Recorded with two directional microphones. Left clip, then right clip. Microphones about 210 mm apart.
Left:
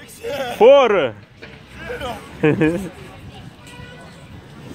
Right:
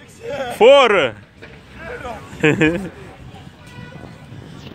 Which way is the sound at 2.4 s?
Centre (ahead or behind).